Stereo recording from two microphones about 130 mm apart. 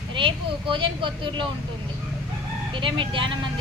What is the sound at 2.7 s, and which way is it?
Speech, 40° right (ahead or behind).